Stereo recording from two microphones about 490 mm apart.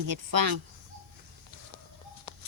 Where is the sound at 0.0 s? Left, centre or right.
Right.